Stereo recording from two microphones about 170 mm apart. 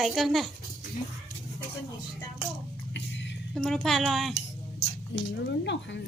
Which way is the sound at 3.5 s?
5° left (ahead or behind).